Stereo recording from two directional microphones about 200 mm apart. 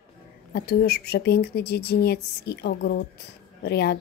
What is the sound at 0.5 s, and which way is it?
A woman's voice, 55° left (ahead or behind).